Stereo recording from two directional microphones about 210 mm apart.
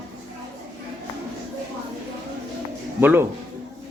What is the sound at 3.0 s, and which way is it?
Speech, 10° right (ahead or behind).